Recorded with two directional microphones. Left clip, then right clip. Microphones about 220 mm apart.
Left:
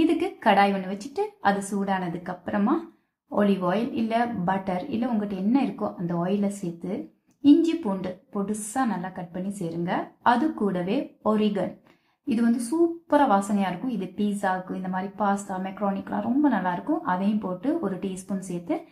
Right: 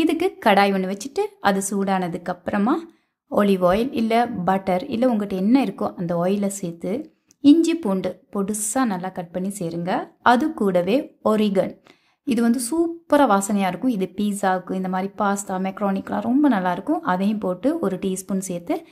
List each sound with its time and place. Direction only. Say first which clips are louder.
0.0 s a woman's voice: right 3 dB; 45° right (ahead or behind)